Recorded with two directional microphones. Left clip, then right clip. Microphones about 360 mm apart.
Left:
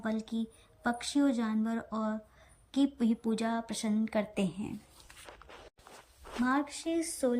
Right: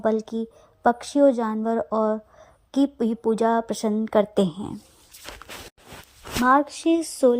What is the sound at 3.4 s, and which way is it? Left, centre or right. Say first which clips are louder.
Speech: right 13 dB; right.